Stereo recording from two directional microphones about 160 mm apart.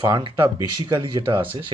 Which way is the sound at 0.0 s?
30° right (ahead or behind).